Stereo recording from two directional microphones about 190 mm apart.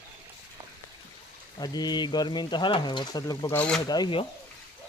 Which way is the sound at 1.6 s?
20° left (ahead or behind).